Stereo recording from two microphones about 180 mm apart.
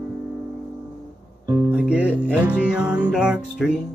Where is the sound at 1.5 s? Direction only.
10° right (ahead or behind).